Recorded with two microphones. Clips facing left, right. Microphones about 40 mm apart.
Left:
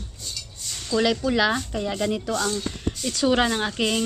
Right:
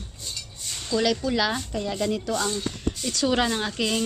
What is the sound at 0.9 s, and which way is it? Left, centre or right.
Speech, centre.